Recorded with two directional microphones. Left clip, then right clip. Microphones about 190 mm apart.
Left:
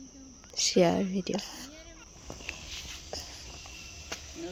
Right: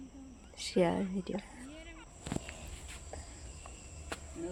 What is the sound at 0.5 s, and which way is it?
Speech, 20° left (ahead or behind).